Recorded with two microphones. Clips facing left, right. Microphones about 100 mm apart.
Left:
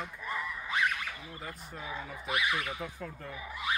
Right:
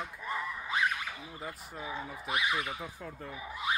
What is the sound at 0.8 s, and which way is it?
Speech, 20° right (ahead or behind).